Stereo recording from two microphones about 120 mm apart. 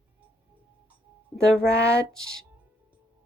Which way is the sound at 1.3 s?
5° left (ahead or behind).